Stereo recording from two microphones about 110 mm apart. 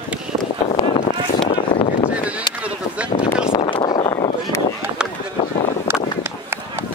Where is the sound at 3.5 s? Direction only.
50° left (ahead or behind).